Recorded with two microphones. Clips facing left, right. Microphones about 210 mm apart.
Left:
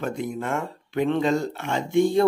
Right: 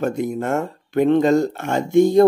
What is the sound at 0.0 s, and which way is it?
Speech, 45° right (ahead or behind).